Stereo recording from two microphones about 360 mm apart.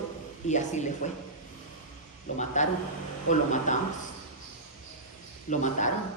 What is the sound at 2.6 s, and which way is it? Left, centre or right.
A man's voice, centre.